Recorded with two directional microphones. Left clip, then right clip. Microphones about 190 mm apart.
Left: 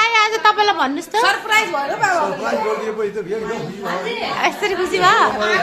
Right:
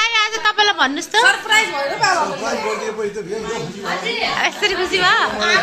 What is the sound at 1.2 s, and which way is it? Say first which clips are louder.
Speech: right 1 dB; 45° left (ahead or behind).